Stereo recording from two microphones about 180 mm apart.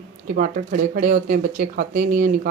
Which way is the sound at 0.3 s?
50° right (ahead or behind).